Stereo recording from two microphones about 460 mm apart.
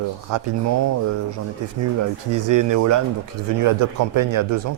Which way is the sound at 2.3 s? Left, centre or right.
Right.